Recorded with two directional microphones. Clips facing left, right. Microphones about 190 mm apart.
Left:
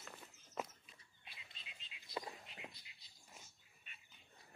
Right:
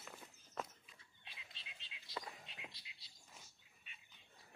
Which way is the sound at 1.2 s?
85° right.